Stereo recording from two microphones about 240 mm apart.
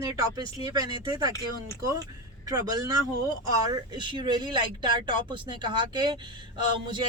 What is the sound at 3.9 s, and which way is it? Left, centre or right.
Speech, centre.